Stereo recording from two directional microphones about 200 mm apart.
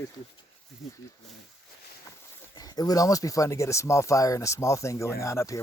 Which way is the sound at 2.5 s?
20° left (ahead or behind).